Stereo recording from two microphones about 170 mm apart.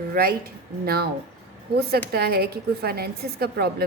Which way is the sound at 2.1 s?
65° right (ahead or behind).